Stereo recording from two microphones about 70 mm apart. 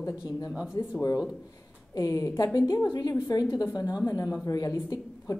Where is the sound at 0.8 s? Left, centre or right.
Left.